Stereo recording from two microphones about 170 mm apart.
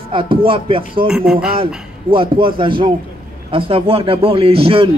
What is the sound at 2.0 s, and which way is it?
A man's voice, 30° right (ahead or behind).